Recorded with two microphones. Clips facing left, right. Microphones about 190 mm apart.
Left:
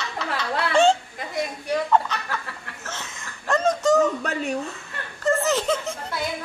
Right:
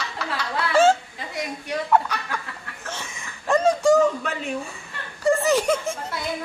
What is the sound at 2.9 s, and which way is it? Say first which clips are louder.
Chicken: right 2 dB; 15° right (ahead or behind).